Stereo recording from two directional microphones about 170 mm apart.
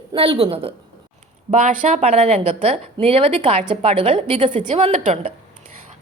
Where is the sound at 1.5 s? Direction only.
50° right (ahead or behind); by 4.9 s 30° right (ahead or behind).